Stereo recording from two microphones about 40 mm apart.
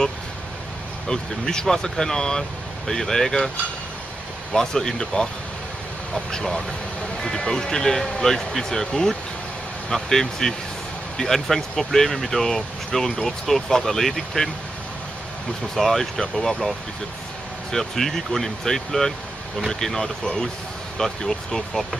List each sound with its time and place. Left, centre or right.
1.0 s speech: centre
4.5 s speech: centre
15.7 s speech: centre
17.6 s speech: centre